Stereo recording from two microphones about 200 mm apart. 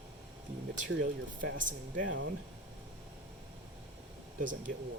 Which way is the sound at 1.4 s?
70° right (ahead or behind).